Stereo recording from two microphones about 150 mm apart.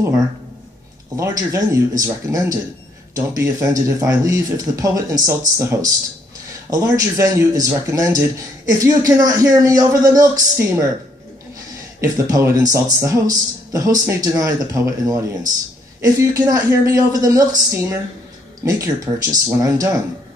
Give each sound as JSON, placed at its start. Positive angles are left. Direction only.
{"t": 1.1, "sound": "speech", "side_deg": -20}
{"t": 12.0, "sound": "speech", "side_deg": -20}